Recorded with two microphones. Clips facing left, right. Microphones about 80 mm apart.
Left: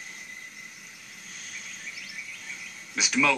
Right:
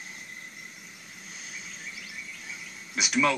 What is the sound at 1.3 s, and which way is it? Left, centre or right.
Vehicle, centre.